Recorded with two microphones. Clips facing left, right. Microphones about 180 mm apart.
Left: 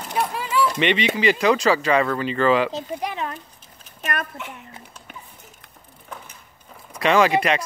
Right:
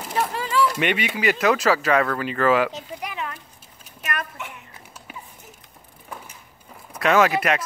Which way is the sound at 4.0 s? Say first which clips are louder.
Left 2 dB; 35° left (ahead or behind).